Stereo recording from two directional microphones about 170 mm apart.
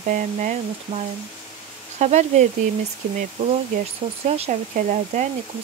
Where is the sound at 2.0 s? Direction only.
45° right (ahead or behind).